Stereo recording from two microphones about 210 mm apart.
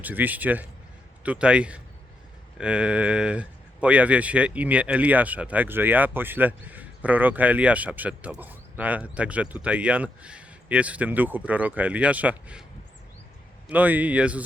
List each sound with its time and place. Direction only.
0.0 s a man's voice: 10° right (ahead or behind)
13.7 s speech: 10° right (ahead or behind)